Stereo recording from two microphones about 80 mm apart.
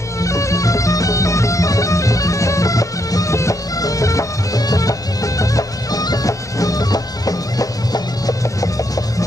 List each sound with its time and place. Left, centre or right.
0.2 s music: left